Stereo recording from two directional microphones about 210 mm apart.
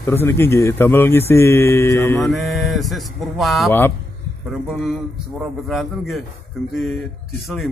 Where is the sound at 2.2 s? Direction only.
Centre (ahead or behind).